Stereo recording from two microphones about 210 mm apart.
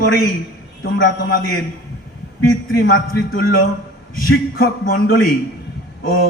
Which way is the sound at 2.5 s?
45° left (ahead or behind).